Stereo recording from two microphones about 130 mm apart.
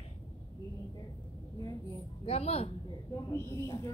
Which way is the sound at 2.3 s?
50° left (ahead or behind).